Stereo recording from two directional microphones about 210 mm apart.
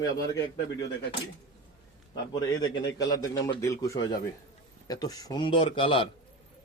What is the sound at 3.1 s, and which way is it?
A man's voice, 15° left (ahead or behind).